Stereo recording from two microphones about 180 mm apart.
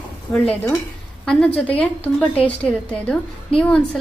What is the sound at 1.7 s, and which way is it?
A woman's voice, 10° left (ahead or behind).